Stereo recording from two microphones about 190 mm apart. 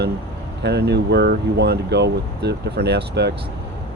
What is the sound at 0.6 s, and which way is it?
Speech, 60° right (ahead or behind).